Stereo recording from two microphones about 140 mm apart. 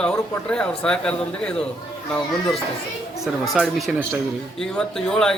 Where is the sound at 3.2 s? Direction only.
Centre (ahead or behind).